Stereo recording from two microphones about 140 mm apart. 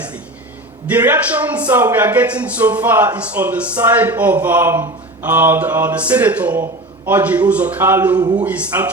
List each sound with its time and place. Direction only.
0.9 s a man's voice: 10° right (ahead or behind)
8.2 s a man's voice: 30° right (ahead or behind)
8.4 s a man's voice: 10° right (ahead or behind)